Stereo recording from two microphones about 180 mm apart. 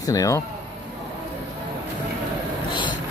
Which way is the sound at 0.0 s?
20° left (ahead or behind).